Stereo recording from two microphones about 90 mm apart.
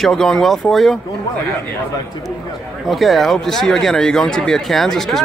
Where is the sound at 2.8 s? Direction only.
Centre (ahead or behind).